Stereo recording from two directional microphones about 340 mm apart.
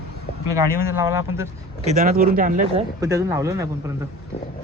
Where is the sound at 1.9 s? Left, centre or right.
Right.